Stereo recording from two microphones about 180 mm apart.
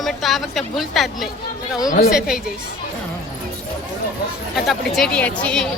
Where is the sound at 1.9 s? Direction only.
55° left (ahead or behind).